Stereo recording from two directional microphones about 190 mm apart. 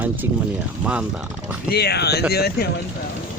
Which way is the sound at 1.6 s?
55° left (ahead or behind).